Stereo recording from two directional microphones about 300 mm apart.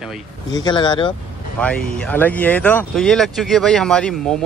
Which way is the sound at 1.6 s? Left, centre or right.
Centre.